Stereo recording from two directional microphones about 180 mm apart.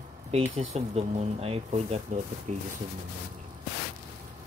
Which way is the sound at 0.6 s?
35° right (ahead or behind).